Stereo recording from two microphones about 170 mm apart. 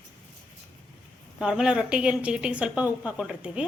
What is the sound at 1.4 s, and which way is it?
A woman's voice, 5° right (ahead or behind).